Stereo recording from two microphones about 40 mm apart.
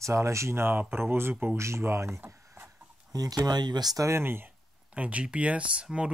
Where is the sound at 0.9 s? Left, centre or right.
Right.